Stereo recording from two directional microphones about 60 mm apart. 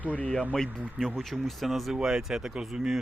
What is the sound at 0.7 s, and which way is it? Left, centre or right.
Speech, right.